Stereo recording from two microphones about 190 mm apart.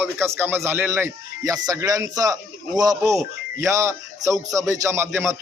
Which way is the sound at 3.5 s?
15° right (ahead or behind).